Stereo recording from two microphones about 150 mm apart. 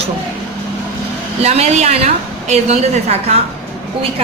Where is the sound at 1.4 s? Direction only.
45° right (ahead or behind).